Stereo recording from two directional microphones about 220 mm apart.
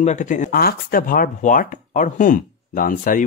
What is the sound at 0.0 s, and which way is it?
Speech, 35° left (ahead or behind).